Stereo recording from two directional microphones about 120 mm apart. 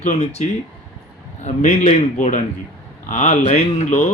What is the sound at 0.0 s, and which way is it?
Speech, 65° left (ahead or behind).